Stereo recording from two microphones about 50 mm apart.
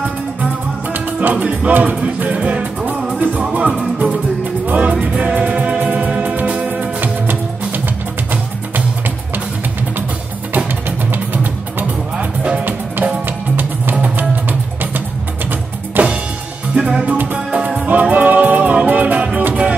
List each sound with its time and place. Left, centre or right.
0.9 s music: right
1.4 s music: right
1.7 s music: right
7.0 s music: right
12.2 s music: right
12.6 s music: right
16.0 s music: right
16.7 s music: centre
17.0 s music: right
18.1 s music: right